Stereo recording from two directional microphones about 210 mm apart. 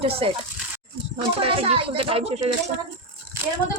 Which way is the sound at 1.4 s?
25° right (ahead or behind).